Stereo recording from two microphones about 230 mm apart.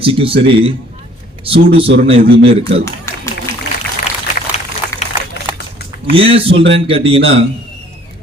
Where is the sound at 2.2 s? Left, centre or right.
Right.